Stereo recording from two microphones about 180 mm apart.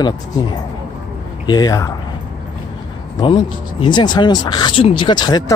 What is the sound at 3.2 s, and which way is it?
Speech, 25° left (ahead or behind).